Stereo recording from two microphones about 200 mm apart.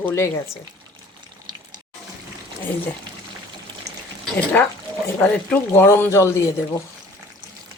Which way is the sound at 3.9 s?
55° right (ahead or behind).